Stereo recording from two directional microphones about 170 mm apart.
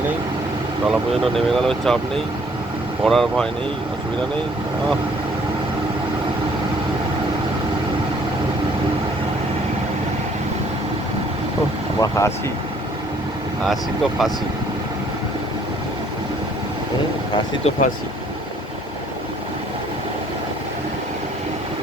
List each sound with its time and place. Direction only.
0.9 s speech: centre (ahead or behind)
3.0 s speech: centre (ahead or behind)
11.9 s speech: 20° left (ahead or behind)
13.7 s speech: centre (ahead or behind)
17.3 s speech: 40° left (ahead or behind)